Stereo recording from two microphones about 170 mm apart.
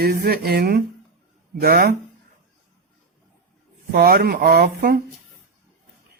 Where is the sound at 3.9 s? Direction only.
70° right (ahead or behind).